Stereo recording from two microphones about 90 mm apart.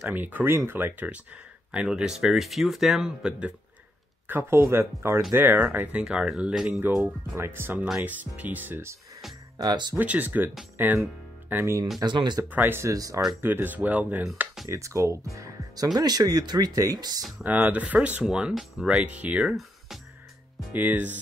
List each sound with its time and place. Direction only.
0.0 s speech: 20° right (ahead or behind)
4.3 s speech: 25° right (ahead or behind); by 6.8 s 10° right (ahead or behind)
6.8 s speech: 25° right (ahead or behind)
9.6 s speech: 50° right (ahead or behind)
9.9 s speech: 20° right (ahead or behind)
12.0 s speech: 55° right (ahead or behind)
12.4 s speech: 20° right (ahead or behind)
12.9 s speech: 40° right (ahead or behind)
13.4 s speech: 25° right (ahead or behind)
14.7 s speech: 35° right (ahead or behind)
17.4 s speech: 20° right (ahead or behind)
18.2 s speech: 5° right (ahead or behind)
19.0 s speech: 15° right (ahead or behind)
20.7 s speech: 20° right (ahead or behind)